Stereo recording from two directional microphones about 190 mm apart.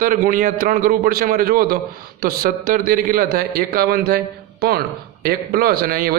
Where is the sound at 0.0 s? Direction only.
45° right (ahead or behind).